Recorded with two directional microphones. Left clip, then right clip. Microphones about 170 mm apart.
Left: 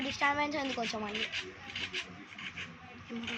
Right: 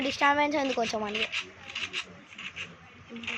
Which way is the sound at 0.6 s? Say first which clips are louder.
Right 7 dB; 10° right (ahead or behind).